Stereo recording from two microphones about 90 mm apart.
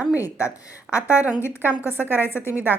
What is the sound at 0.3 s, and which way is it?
A woman's voice, 35° left (ahead or behind).